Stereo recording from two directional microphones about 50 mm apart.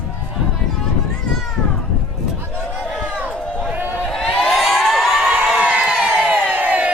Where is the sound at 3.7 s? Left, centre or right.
Right.